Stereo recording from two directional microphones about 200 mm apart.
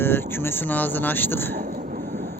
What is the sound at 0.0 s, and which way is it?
Speech, 10° left (ahead or behind).